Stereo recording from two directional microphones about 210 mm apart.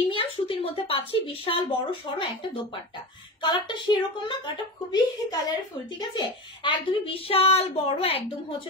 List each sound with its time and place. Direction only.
0.1 s a woman's voice: 25° left (ahead or behind)